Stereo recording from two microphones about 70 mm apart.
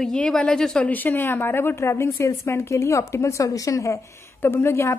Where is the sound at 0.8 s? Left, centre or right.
Left.